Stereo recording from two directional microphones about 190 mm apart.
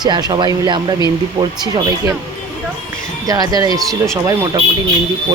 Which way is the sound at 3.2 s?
20° right (ahead or behind).